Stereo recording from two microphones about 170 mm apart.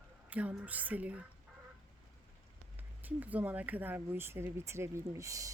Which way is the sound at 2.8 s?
10° right (ahead or behind).